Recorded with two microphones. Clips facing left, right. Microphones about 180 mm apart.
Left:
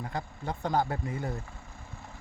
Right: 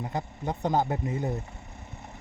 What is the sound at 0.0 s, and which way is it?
Speech, 20° right (ahead or behind).